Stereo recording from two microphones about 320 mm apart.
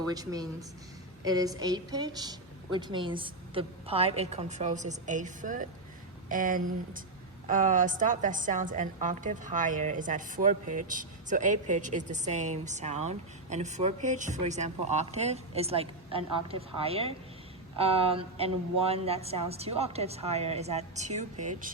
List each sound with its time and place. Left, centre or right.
0.1 s a woman's voice: centre